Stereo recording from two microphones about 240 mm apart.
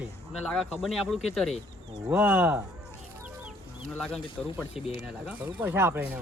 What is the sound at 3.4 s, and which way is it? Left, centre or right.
Chicken, centre.